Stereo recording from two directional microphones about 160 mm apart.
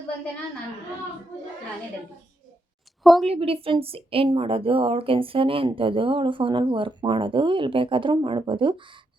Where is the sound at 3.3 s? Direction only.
35° right (ahead or behind).